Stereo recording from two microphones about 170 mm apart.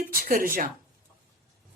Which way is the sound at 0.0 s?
60° right (ahead or behind).